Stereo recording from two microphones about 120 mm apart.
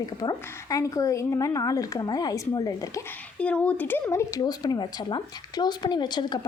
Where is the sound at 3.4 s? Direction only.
10° left (ahead or behind); by 6.4 s 35° left (ahead or behind).